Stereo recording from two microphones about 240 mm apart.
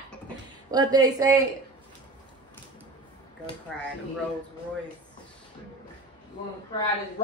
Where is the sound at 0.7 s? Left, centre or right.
Centre.